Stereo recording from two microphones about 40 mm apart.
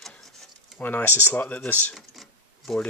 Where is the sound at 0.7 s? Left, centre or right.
Left.